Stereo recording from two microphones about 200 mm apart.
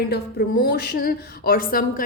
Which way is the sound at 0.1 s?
50° left (ahead or behind).